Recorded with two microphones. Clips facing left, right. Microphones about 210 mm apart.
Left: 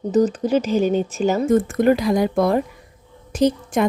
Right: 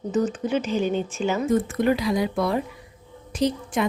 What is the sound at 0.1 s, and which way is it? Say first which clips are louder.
A woman's voice: left 6 dB; 35° left (ahead or behind).